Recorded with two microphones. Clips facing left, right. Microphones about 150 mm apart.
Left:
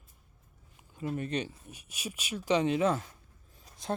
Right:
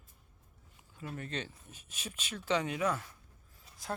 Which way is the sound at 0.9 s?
20° left (ahead or behind).